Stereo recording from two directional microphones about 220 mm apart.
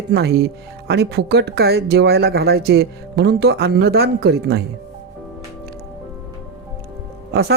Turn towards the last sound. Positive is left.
turn(degrees=-45)  # may be behind; listen again after turning